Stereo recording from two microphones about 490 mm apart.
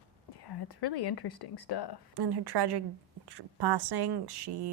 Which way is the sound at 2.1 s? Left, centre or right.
Right.